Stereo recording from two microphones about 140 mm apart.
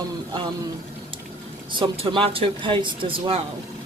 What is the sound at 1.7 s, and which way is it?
Speech, 35° right (ahead or behind).